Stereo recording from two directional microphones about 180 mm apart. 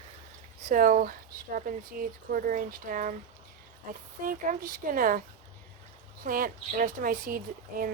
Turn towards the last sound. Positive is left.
turn(degrees=-50)  # may be behind; listen again after turning